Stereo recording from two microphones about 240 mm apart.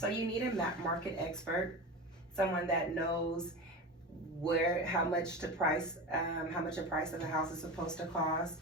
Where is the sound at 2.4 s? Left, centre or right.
Centre.